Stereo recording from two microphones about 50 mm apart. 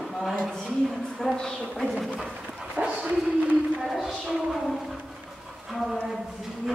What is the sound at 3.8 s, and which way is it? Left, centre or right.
A woman's voice, centre.